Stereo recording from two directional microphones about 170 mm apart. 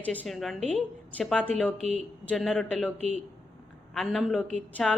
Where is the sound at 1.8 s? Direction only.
40° right (ahead or behind).